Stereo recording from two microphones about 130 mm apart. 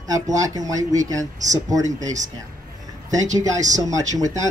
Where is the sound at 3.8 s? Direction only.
25° right (ahead or behind).